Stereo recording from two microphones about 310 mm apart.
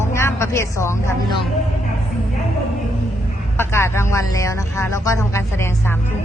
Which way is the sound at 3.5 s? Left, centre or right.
Centre.